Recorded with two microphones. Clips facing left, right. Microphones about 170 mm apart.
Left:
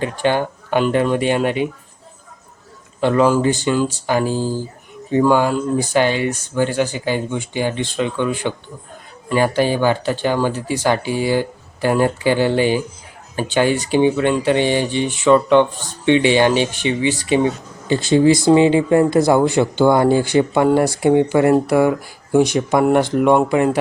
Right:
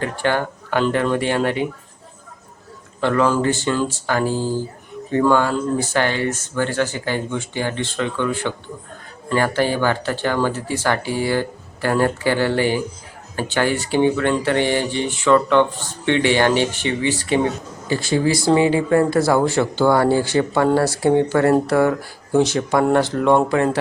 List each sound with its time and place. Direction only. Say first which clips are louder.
0.0 s speech: left 2 dB; 20° left (ahead or behind)
3.0 s speech: left 3 dB; 15° left (ahead or behind)